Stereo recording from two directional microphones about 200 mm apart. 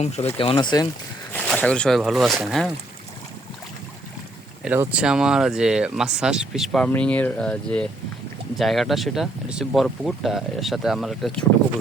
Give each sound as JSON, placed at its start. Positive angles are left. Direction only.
{"t": 0.3, "sound": "speech", "side_deg": 25}
{"t": 1.3, "sound": "speech", "side_deg": 5}
{"t": 4.6, "sound": "speech", "side_deg": -5}